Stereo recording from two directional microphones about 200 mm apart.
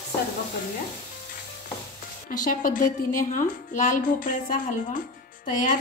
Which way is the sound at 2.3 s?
40° left (ahead or behind).